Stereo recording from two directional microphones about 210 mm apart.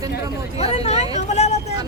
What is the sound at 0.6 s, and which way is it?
Speech, 30° left (ahead or behind).